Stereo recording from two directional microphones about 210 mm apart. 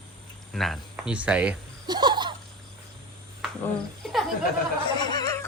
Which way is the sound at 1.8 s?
20° right (ahead or behind).